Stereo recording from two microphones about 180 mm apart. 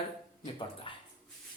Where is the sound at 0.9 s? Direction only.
30° left (ahead or behind).